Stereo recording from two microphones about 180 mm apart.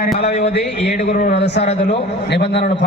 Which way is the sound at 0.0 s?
60° left (ahead or behind).